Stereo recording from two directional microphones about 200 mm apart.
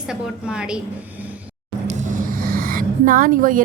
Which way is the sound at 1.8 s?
40° right (ahead or behind).